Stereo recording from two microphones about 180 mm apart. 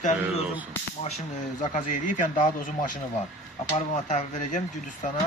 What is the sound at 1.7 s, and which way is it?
Speech, 45° left (ahead or behind).